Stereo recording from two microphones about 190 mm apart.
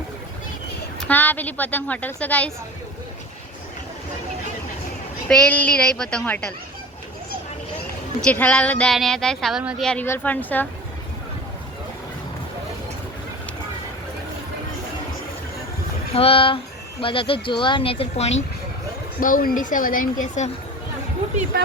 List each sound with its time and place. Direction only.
0.9 s a woman's voice: 10° left (ahead or behind)
5.3 s speech: 5° left (ahead or behind)
8.2 s speech: 5° left (ahead or behind)
16.1 s speech: 30° left (ahead or behind)
19.2 s speech: 45° left (ahead or behind)